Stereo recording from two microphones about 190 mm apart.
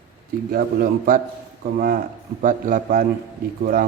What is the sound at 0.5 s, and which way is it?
A man's voice, 50° right (ahead or behind).